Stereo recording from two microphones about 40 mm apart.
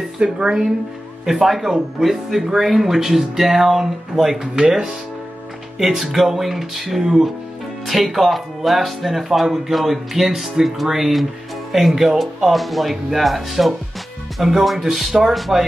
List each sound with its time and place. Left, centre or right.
0.2 s speech: right
1.2 s speech: centre
12.5 s speech: centre